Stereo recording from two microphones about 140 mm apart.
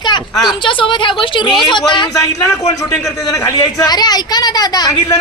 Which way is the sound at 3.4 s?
25° left (ahead or behind).